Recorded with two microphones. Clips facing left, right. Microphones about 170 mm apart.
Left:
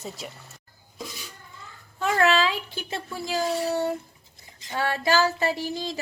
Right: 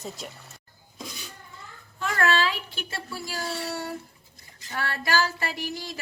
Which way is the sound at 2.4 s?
20° left (ahead or behind).